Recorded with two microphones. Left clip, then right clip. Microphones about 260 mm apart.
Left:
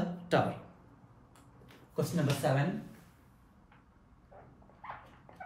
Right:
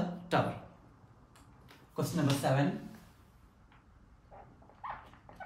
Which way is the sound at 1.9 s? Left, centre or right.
Centre.